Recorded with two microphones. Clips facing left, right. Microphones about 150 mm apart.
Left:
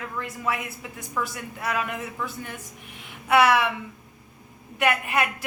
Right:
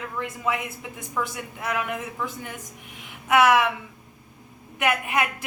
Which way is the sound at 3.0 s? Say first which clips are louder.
Even; 15° right (ahead or behind).